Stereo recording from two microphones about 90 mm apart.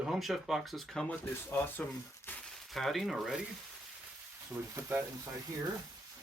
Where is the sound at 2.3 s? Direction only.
20° left (ahead or behind).